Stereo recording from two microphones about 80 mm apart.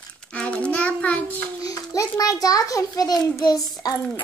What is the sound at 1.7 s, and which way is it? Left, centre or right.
A child's voice, left.